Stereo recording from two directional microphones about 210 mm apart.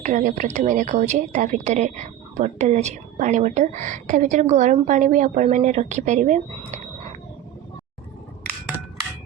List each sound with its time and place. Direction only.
0.0 s a woman's voice: 35° right (ahead or behind)